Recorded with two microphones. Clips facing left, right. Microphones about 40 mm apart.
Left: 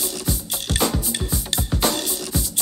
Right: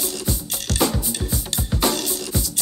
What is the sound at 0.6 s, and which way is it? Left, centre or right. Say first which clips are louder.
Music: right 1 dB; left.